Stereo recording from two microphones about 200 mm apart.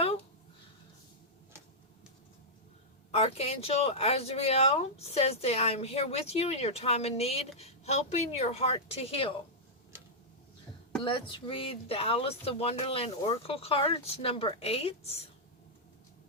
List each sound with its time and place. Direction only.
3.1 s speech: 30° left (ahead or behind)
9.9 s tick-tock: 10° right (ahead or behind)
11.0 s speech: 25° left (ahead or behind)